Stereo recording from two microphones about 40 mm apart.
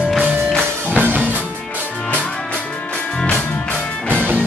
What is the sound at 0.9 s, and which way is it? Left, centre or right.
Music, right.